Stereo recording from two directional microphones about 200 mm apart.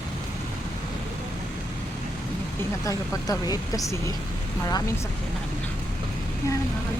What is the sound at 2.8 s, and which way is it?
Speech, 15° left (ahead or behind).